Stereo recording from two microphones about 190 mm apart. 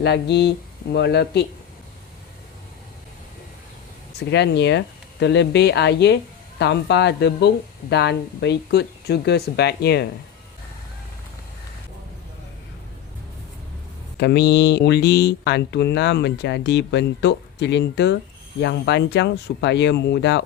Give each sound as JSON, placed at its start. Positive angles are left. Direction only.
{"t": 0.0, "sound": "speech", "side_deg": 60}
{"t": 4.3, "sound": "speech", "side_deg": 65}
{"t": 14.2, "sound": "speech", "side_deg": 60}